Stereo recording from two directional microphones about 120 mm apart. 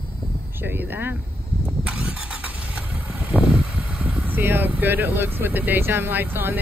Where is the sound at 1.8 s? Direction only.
10° right (ahead or behind).